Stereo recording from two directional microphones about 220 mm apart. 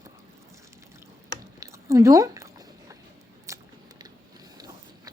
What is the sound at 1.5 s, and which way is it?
Chewing, 15° right (ahead or behind).